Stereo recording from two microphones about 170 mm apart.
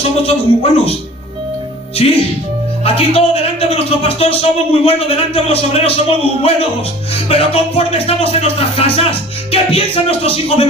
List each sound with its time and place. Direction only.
0.2 s a man's voice: 35° left (ahead or behind)
2.0 s a man's voice: 35° left (ahead or behind)